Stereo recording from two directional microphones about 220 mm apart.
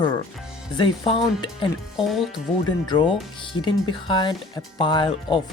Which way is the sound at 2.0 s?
Centre (ahead or behind).